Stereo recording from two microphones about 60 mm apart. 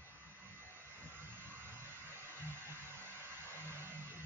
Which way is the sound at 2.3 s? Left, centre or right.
Right.